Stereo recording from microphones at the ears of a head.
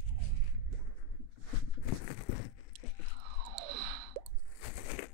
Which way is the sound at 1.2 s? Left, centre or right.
Left.